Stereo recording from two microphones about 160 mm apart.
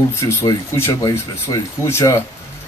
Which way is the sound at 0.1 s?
15° left (ahead or behind).